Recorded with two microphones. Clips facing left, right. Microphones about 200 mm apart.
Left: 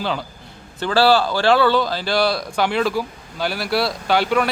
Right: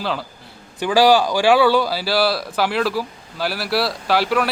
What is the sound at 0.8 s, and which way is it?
Speech, 15° right (ahead or behind).